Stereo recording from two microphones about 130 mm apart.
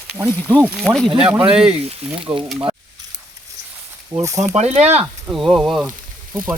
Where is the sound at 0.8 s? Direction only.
5° left (ahead or behind).